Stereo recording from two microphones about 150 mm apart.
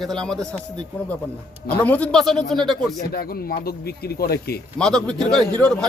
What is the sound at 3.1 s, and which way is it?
Speech, 90° left.